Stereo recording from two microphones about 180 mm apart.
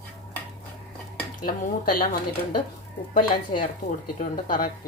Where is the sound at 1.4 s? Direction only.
50° left (ahead or behind).